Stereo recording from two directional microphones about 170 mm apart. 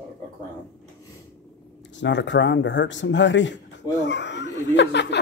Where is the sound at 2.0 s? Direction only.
90° left.